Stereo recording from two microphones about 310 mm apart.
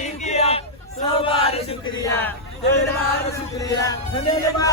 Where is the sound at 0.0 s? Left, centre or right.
Left.